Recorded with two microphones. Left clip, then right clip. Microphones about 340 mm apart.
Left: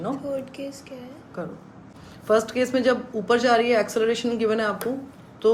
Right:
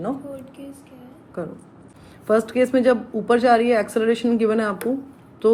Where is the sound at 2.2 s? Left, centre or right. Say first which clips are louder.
Right 2 dB; centre.